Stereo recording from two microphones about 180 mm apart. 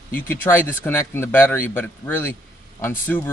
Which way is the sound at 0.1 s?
10° left (ahead or behind).